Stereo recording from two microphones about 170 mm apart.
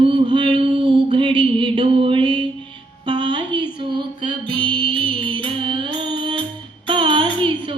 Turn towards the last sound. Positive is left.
turn(degrees=-30)  # may be behind; listen again after turning